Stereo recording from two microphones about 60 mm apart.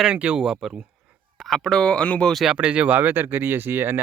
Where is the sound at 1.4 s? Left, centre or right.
Centre.